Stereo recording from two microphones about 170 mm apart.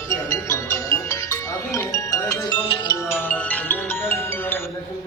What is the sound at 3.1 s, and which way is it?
Music, 10° left (ahead or behind).